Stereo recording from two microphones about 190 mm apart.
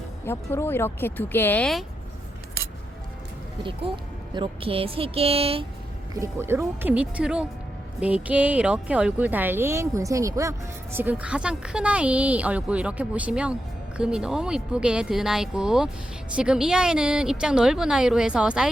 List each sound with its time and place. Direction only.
0.3 s speech: 10° left (ahead or behind)
3.6 s speech: 25° right (ahead or behind)
6.1 s speech: 15° right (ahead or behind)